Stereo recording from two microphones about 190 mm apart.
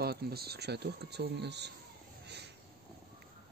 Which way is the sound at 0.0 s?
55° right (ahead or behind).